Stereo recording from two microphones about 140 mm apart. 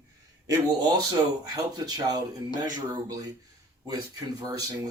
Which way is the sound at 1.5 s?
30° right (ahead or behind).